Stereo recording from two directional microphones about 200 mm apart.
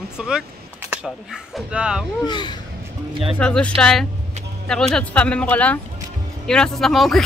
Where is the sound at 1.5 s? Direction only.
5° right (ahead or behind).